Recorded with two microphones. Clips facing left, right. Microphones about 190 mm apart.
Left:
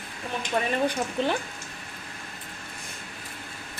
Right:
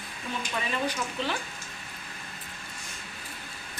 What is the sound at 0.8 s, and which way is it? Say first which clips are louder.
Speech: left 5 dB; 55° left (ahead or behind).